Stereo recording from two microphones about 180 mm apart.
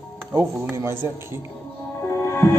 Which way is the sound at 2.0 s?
15° left (ahead or behind).